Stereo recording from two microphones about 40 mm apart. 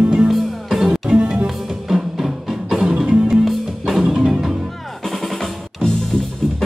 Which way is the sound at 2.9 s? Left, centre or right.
Right.